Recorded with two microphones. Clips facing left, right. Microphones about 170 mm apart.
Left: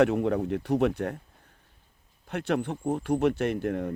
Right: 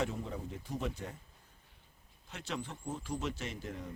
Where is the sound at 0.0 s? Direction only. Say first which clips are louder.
Left 14 dB; 70° left (ahead or behind).